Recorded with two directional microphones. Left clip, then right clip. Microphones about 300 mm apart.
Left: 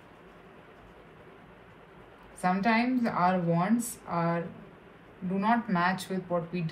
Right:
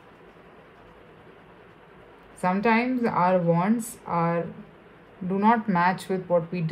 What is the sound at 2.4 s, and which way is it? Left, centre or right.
A woman's voice, right.